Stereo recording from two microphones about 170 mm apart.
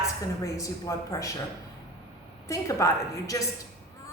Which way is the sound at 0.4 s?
20° left (ahead or behind).